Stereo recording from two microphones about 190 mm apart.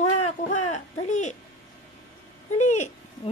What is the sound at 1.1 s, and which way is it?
Speech, 40° left (ahead or behind).